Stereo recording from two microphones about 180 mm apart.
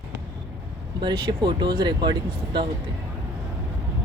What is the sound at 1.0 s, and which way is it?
Speech, 25° right (ahead or behind).